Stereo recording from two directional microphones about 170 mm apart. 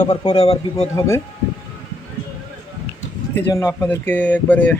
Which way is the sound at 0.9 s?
15° left (ahead or behind).